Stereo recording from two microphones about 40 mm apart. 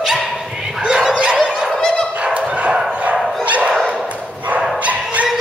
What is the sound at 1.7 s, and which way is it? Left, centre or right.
Dog, centre.